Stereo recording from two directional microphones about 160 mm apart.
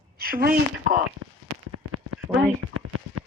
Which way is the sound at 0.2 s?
70° right (ahead or behind).